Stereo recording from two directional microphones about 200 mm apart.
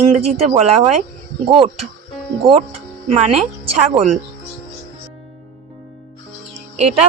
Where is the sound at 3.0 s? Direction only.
30° right (ahead or behind).